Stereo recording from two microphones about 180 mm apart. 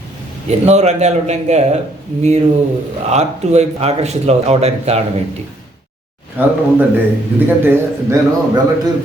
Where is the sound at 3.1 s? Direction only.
35° right (ahead or behind).